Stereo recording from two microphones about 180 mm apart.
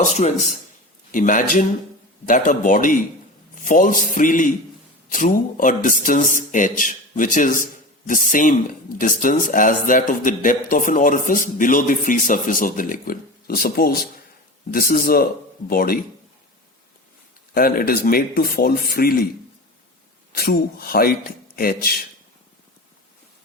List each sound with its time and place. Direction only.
0.0 s speech: 40° left (ahead or behind); by 16.0 s 55° left (ahead or behind)
17.5 s speech: 55° left (ahead or behind)
20.3 s speech: 55° left (ahead or behind)